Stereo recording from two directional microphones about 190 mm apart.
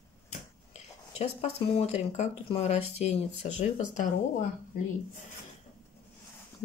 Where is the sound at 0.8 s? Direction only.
35° left (ahead or behind).